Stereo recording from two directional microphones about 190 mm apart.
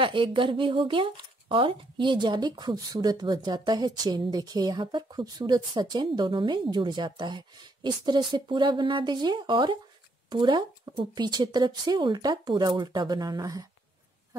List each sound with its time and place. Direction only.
0.0 s speech: 25° right (ahead or behind)